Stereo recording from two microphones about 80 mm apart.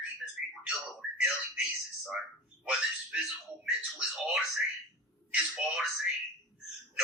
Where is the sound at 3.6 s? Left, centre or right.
Centre.